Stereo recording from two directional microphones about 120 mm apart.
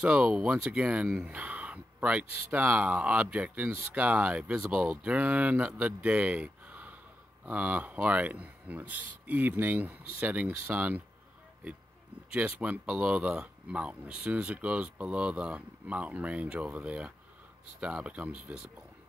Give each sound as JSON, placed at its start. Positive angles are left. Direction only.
{"t": 0.0, "sound": "speech", "side_deg": -10}
{"t": 12.3, "sound": "speech", "side_deg": -10}